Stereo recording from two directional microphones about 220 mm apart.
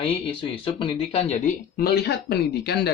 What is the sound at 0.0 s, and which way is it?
Speech, 25° left (ahead or behind).